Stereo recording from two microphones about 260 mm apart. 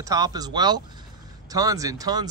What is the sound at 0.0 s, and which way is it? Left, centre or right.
Speech, centre.